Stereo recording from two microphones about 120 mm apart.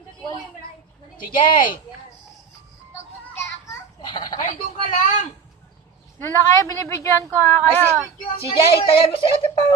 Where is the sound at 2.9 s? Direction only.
25° left (ahead or behind).